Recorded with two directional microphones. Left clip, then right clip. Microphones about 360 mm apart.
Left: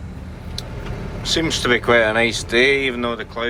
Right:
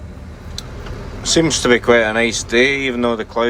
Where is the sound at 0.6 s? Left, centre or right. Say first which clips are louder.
Right 1 dB; centre.